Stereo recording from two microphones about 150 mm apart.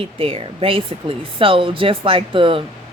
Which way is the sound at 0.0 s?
40° right (ahead or behind).